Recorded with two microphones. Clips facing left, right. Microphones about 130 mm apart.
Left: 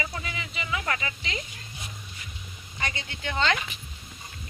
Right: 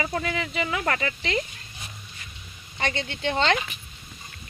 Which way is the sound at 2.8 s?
30° right (ahead or behind).